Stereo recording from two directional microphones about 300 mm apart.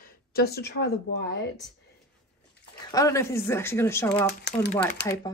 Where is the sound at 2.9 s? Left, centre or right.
Centre.